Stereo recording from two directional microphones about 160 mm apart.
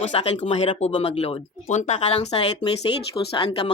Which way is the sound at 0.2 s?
40° left (ahead or behind).